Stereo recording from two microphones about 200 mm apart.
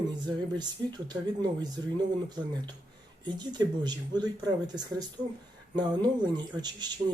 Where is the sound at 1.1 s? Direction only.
20° right (ahead or behind).